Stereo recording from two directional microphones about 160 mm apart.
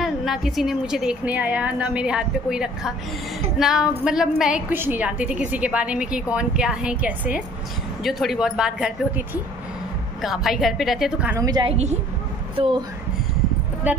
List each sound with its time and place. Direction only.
0.0 s a woman's voice: centre (ahead or behind)
11.3 s a woman's voice: 25° right (ahead or behind)
11.7 s a woman's voice: 45° right (ahead or behind)
12.5 s speech: 35° right (ahead or behind)
13.9 s a woman's voice: 10° right (ahead or behind)